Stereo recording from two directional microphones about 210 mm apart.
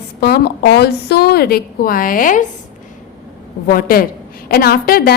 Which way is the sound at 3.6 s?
45° left (ahead or behind).